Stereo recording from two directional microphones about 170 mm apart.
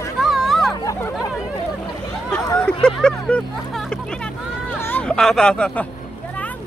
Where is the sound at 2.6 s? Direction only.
5° left (ahead or behind).